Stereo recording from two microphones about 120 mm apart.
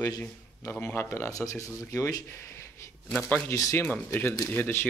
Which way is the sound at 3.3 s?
10° left (ahead or behind).